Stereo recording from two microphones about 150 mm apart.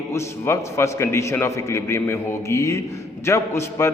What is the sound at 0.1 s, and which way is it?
A man's voice, 20° left (ahead or behind).